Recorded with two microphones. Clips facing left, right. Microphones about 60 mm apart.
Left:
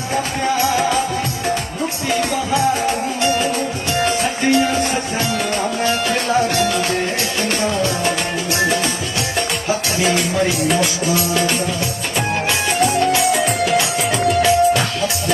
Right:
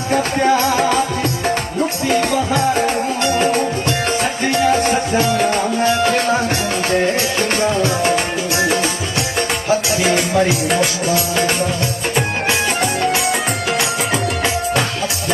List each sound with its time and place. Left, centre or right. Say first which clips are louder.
0.1 s music: right 5 dB; right
3.4 s music: right 4 dB; right
4.7 s music: right 4 dB; right
12.8 s music: left 2 dB; centre